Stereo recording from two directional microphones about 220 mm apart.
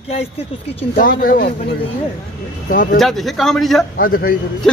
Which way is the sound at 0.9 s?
40° left (ahead or behind).